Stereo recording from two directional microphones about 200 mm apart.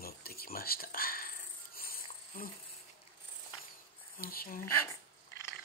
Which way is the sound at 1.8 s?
45° left (ahead or behind).